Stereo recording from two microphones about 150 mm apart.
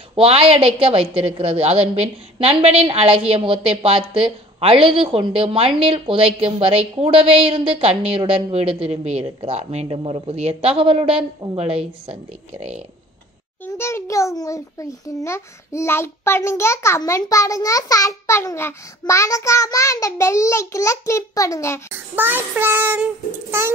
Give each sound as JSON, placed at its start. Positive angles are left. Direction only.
{"t": 0.1, "sound": "a woman's voice", "side_deg": -40}
{"t": 13.7, "sound": "a child's voice", "side_deg": 15}
{"t": 21.9, "sound": "child singing", "side_deg": -15}